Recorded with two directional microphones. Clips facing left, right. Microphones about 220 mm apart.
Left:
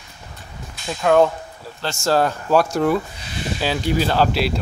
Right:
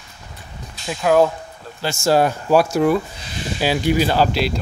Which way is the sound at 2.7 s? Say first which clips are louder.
Right 2 dB; 5° right (ahead or behind).